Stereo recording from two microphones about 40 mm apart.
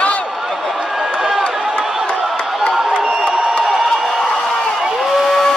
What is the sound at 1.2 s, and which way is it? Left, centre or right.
Run, centre.